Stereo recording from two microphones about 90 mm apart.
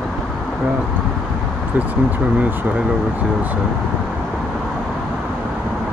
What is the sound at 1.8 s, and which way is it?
Speech, 20° right (ahead or behind).